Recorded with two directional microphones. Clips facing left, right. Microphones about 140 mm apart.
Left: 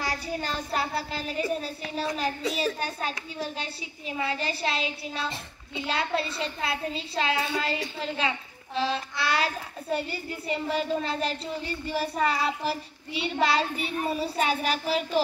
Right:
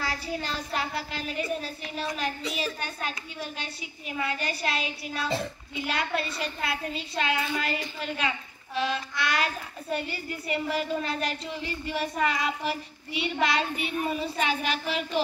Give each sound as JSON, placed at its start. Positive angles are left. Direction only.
{"t": 0.1, "sound": "a child's voice", "side_deg": 40}